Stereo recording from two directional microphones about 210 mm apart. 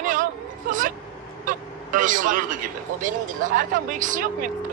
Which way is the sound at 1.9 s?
40° right (ahead or behind).